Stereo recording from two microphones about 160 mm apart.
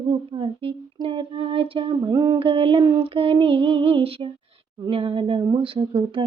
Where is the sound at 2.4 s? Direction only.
35° right (ahead or behind).